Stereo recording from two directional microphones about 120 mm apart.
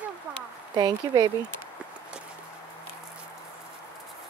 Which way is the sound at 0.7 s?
35° right (ahead or behind).